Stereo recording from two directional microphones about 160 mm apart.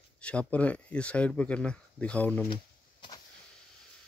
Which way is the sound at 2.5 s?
30° left (ahead or behind).